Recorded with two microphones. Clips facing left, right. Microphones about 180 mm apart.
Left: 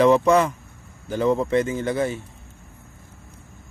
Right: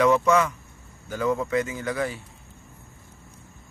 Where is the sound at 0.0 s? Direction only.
30° left (ahead or behind).